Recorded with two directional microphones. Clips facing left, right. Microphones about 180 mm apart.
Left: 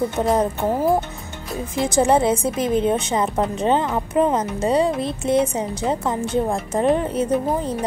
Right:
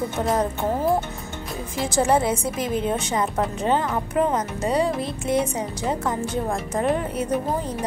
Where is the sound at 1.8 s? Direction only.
20° left (ahead or behind).